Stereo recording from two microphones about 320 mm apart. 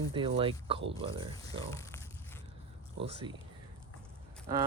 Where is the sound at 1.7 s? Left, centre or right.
Centre.